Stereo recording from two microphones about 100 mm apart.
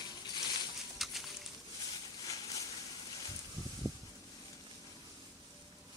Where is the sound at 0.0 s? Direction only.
45° left (ahead or behind).